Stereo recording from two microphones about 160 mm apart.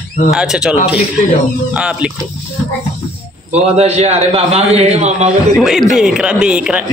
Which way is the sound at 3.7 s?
40° right (ahead or behind).